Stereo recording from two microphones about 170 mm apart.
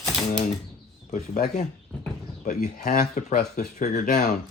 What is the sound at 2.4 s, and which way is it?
Speech, 45° left (ahead or behind).